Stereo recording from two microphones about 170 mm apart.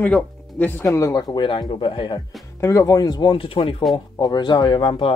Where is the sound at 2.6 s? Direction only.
15° left (ahead or behind).